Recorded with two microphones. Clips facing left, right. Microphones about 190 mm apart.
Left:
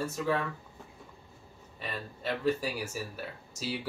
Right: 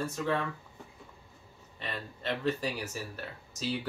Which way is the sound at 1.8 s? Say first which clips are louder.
Left 1 dB; 5° left (ahead or behind).